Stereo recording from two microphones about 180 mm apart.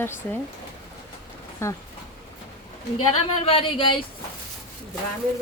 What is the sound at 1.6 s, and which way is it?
Speech, 15° left (ahead or behind).